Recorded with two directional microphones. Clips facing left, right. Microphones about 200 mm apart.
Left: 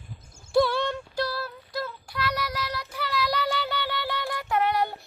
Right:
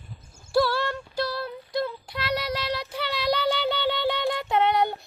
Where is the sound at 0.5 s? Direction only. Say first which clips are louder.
Left 1 dB; 20° left (ahead or behind).